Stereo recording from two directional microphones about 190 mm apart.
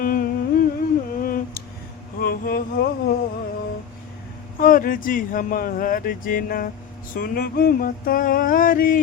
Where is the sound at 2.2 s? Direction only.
50° left (ahead or behind).